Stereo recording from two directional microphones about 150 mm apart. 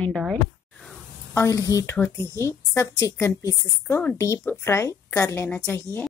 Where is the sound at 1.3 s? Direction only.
20° left (ahead or behind).